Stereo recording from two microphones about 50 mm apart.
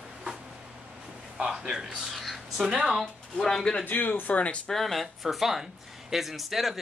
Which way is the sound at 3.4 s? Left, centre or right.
Centre.